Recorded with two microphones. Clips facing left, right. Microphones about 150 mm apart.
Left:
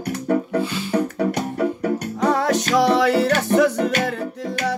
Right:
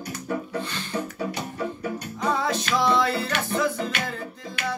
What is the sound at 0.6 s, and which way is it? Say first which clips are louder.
Music: left 8 dB; 10° left (ahead or behind).